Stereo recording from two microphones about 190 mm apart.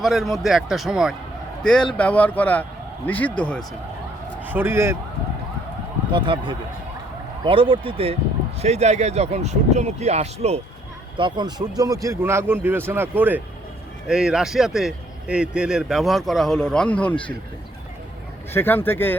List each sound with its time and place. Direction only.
0.0 s a man's voice: centre (ahead or behind)
4.4 s a man's voice: 10° right (ahead or behind)
6.1 s speech: 25° right (ahead or behind)
11.2 s a man's voice: 25° right (ahead or behind); by 17.2 s 5° left (ahead or behind)
18.5 s speech: 10° left (ahead or behind)